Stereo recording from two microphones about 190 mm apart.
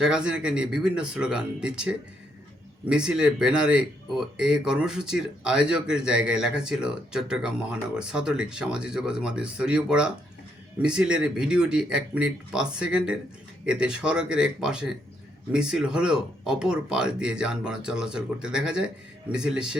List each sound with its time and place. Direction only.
0.0 s speech: 5° right (ahead or behind)